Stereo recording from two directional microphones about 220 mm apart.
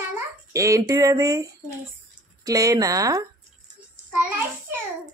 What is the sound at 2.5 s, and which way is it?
Speech, 15° right (ahead or behind).